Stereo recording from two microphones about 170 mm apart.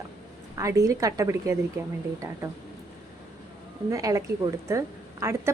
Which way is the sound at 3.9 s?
20° right (ahead or behind).